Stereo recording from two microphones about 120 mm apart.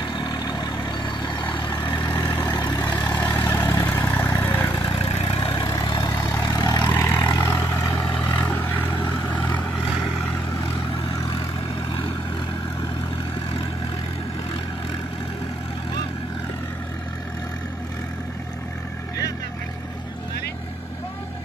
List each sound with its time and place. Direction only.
0.0 s vehicle: 40° left (ahead or behind)
3.2 s vehicle: 20° left (ahead or behind)
4.8 s vehicle: 50° left (ahead or behind); by 7.2 s 25° left (ahead or behind)
7.2 s vehicle: 40° left (ahead or behind)
8.4 s vehicle: 15° left (ahead or behind)